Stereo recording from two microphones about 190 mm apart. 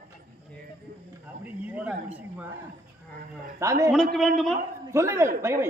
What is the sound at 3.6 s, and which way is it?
Speech, 15° right (ahead or behind).